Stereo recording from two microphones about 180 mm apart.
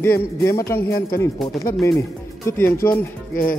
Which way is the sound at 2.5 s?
10° left (ahead or behind).